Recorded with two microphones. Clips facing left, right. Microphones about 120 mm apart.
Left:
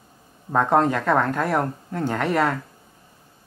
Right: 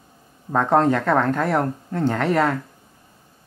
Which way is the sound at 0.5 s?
5° left (ahead or behind).